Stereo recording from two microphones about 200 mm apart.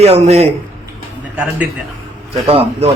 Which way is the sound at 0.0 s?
30° right (ahead or behind).